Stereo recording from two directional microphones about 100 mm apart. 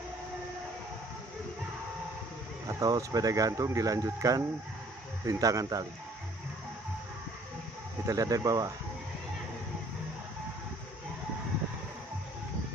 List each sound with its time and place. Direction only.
2.7 s speech: 35° right (ahead or behind)
8.1 s speech: 35° right (ahead or behind)